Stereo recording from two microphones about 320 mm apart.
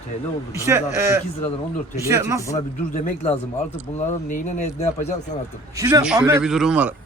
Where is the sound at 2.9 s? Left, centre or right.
Left.